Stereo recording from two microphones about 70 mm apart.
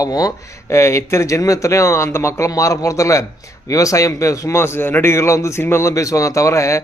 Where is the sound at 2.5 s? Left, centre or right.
Left.